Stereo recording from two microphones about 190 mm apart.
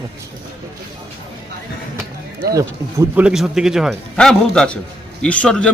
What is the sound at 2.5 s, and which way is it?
Speech, 15° right (ahead or behind).